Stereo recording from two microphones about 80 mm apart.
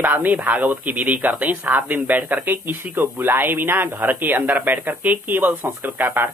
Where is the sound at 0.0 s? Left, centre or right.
Right.